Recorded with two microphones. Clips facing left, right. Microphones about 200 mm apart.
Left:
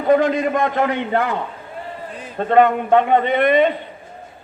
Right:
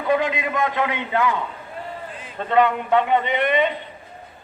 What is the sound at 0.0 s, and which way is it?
A man's voice, 45° left (ahead or behind).